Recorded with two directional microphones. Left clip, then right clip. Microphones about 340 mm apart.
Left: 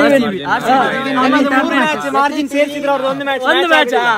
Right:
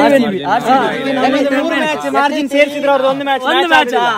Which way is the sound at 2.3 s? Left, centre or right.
Right.